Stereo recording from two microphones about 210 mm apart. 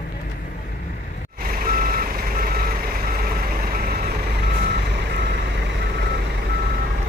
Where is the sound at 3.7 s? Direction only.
45° right (ahead or behind).